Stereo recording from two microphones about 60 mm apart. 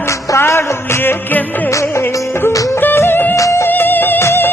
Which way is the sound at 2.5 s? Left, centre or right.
Left.